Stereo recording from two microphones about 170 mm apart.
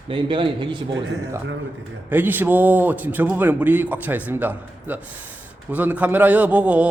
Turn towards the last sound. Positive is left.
turn(degrees=-10)  # may be behind; listen again after turning